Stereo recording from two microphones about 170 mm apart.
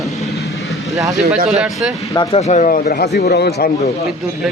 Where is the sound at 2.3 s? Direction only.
40° left (ahead or behind); by 3.7 s 75° left (ahead or behind).